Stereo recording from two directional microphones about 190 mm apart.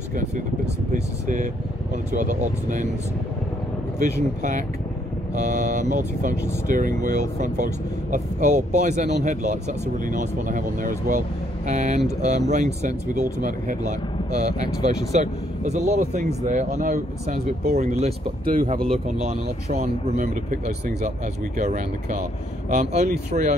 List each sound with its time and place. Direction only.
1.2 s speech: 40° right (ahead or behind)
4.0 s speech: 40° right (ahead or behind)